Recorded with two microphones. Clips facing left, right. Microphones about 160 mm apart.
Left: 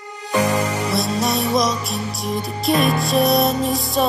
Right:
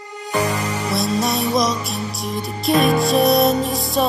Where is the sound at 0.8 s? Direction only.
Centre (ahead or behind).